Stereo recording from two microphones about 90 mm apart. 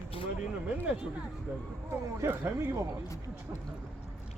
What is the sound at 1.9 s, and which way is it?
Speech, 30° right (ahead or behind).